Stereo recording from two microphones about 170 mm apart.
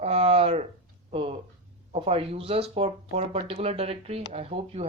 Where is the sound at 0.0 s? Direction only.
35° right (ahead or behind).